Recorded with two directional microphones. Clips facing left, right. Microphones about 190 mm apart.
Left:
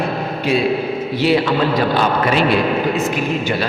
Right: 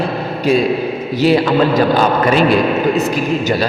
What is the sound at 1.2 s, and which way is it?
A man's voice, 40° right (ahead or behind).